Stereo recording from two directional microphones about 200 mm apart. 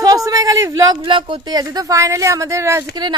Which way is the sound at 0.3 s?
15° right (ahead or behind).